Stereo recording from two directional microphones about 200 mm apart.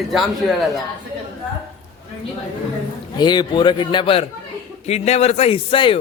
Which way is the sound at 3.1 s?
20° left (ahead or behind).